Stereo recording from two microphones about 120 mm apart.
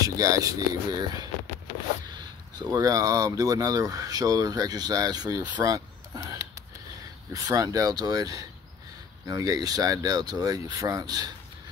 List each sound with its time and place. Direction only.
0.0 s speech: 30° right (ahead or behind)
5.6 s a sound: 30° right (ahead or behind)
7.3 s speech: 25° right (ahead or behind)